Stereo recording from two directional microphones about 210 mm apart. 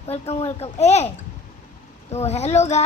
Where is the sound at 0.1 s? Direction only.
30° left (ahead or behind).